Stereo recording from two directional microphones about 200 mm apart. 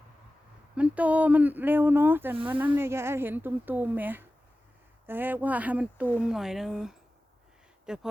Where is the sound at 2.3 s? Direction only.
25° right (ahead or behind).